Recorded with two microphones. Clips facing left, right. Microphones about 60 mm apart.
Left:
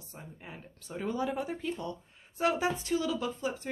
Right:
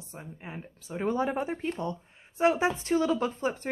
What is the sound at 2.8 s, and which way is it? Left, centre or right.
Speech, right.